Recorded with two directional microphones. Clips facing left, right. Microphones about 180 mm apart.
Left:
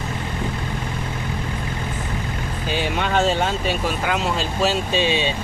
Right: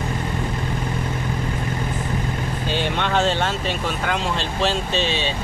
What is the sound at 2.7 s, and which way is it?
Speech, 5° left (ahead or behind).